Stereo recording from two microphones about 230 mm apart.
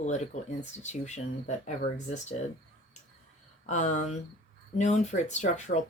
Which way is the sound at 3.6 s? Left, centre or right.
Left.